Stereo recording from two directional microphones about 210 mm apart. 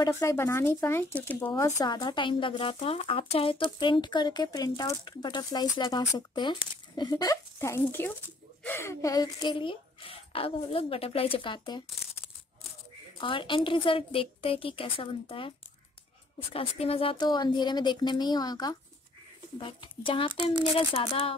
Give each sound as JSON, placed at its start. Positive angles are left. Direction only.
{"t": 0.0, "sound": "speech", "side_deg": 15}
{"t": 13.2, "sound": "speech", "side_deg": 25}
{"t": 16.5, "sound": "speech", "side_deg": 30}